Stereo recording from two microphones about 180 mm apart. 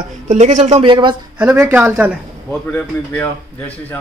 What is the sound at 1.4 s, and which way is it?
Speech, 10° right (ahead or behind).